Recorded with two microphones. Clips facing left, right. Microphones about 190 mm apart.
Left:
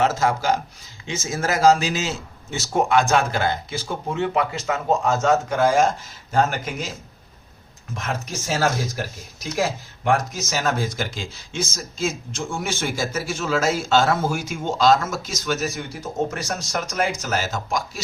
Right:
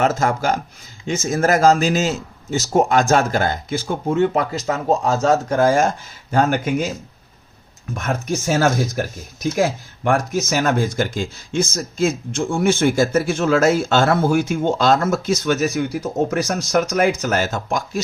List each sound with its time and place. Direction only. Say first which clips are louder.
0.0 s a man's voice: right 2 dB; 50° right (ahead or behind)
8.0 s speech: right 7 dB; 55° right (ahead or behind)